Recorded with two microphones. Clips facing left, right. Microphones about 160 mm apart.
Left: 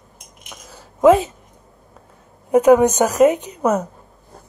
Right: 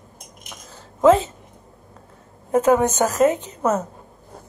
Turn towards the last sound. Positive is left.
turn(degrees=15)  # may be behind; listen again after turning